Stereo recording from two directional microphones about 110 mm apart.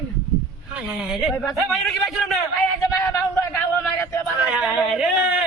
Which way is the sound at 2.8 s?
25° left (ahead or behind).